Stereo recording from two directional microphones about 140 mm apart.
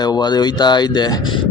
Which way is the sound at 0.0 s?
30° left (ahead or behind).